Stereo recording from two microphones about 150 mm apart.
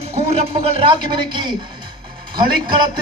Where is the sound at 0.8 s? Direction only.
30° right (ahead or behind).